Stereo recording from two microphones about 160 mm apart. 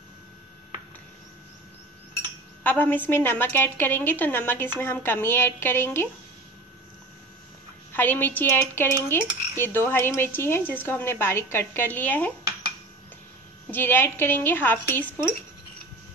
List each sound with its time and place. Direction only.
2.6 s dishes: 10° left (ahead or behind)
7.9 s dishes: 10° left (ahead or behind)
13.7 s dishes: 15° left (ahead or behind)